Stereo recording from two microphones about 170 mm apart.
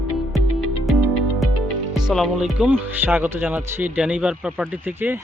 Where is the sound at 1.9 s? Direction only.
Centre (ahead or behind).